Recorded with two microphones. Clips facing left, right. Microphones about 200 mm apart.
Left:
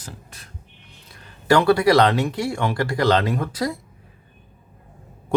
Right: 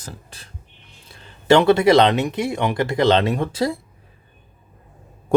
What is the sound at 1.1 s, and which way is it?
Speech, 25° right (ahead or behind).